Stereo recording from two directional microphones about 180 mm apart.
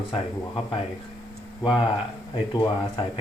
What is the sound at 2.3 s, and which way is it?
Speech, 30° left (ahead or behind).